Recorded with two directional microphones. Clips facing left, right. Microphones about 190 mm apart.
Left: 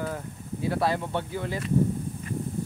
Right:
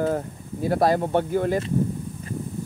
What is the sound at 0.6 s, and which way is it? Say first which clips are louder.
Speech: right 6 dB; 45° right (ahead or behind).